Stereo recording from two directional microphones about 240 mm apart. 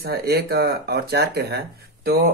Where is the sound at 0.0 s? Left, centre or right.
Right.